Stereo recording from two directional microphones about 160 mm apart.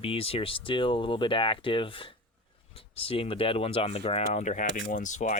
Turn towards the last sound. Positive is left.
turn(degrees=50)  # may be behind; listen again after turning